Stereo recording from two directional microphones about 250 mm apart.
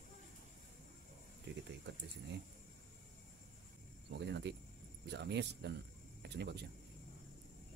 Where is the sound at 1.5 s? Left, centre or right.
Right.